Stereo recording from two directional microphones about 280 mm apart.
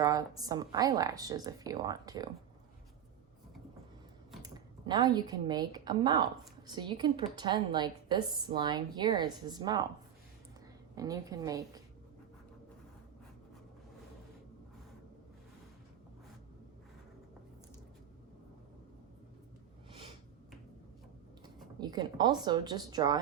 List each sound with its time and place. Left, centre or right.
0.0 s a woman's voice: centre
4.4 s a woman's voice: centre
10.9 s a woman's voice: centre
19.9 s snort: centre
21.8 s a woman's voice: centre